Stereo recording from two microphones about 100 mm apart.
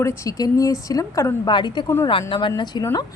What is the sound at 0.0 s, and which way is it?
A woman's voice, 30° left (ahead or behind).